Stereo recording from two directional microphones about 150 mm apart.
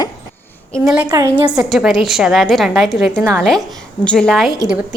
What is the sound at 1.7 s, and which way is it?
A woman's voice, centre (ahead or behind).